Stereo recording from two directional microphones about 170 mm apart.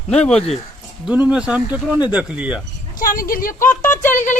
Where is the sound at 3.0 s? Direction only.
55° left (ahead or behind).